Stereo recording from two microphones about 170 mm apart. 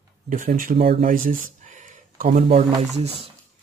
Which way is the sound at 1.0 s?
55° right (ahead or behind).